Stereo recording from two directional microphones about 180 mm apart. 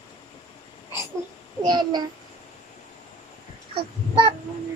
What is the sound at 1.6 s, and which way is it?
Child singing, 25° right (ahead or behind).